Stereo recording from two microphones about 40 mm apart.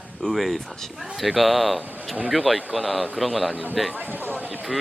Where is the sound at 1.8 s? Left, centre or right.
Right.